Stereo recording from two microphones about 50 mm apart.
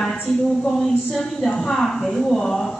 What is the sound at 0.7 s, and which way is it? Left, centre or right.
A man's voice, centre.